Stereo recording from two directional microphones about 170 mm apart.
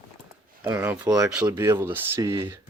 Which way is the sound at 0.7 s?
10° right (ahead or behind).